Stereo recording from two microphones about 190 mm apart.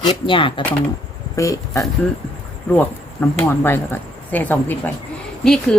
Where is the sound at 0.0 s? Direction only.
25° left (ahead or behind).